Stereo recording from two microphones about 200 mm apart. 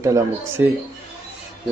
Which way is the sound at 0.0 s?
15° right (ahead or behind).